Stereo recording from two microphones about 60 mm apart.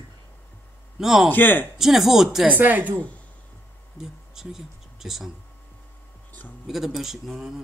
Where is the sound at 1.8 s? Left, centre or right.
Centre.